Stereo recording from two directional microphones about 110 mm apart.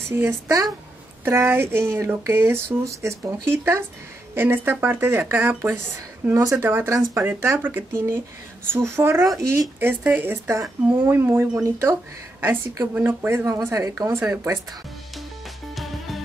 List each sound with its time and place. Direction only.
0.1 s speech: 20° right (ahead or behind)
9.8 s speech: 20° right (ahead or behind)
15.7 s music: centre (ahead or behind)